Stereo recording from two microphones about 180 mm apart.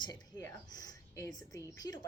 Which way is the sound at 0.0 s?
20° left (ahead or behind).